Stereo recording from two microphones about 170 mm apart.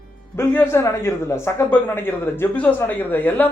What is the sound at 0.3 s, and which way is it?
Speech, 15° left (ahead or behind).